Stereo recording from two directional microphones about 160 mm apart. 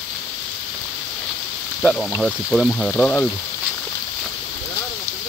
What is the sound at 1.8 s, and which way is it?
Speech, 5° left (ahead or behind).